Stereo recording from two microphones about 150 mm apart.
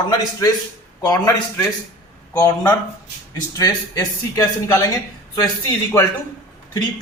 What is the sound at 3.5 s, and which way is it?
Speech, 25° left (ahead or behind).